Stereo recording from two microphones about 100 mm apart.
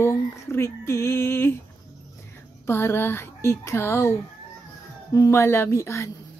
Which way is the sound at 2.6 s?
25° left (ahead or behind).